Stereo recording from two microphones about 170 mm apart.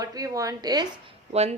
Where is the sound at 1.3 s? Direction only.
40° right (ahead or behind).